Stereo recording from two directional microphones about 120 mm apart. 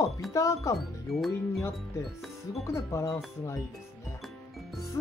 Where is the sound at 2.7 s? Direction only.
25° left (ahead or behind).